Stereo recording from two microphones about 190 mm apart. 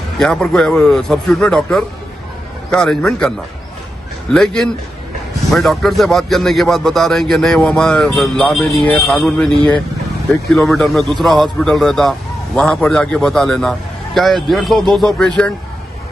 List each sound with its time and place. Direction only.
0.2 s a man's voice: 5° left (ahead or behind)
10.5 s a man's voice: centre (ahead or behind)